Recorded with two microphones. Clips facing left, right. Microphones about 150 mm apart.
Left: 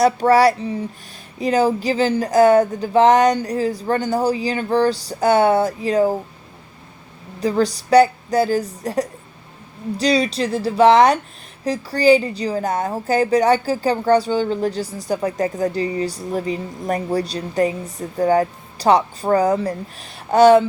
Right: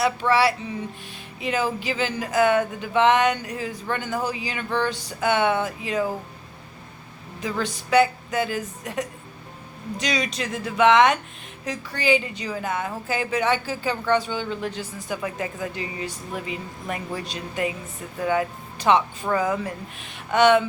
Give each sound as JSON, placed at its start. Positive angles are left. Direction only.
{"t": 0.0, "sound": "a woman's voice", "side_deg": 40}
{"t": 7.3, "sound": "a woman's voice", "side_deg": 35}